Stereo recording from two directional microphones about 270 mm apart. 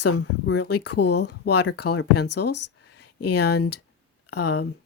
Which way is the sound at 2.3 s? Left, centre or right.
Left.